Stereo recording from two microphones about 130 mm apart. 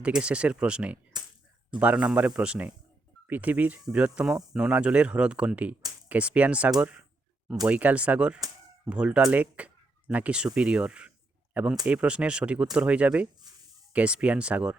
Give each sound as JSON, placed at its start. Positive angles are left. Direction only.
{"t": 0.0, "sound": "speech", "side_deg": -10}
{"t": 1.1, "sound": "a sound", "side_deg": -30}
{"t": 1.8, "sound": "speech", "side_deg": -10}